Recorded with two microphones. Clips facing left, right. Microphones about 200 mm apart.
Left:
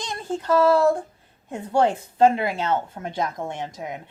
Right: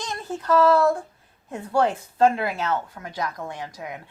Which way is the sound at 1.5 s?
25° left (ahead or behind).